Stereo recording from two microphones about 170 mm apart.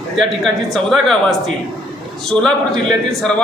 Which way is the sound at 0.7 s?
Centre (ahead or behind).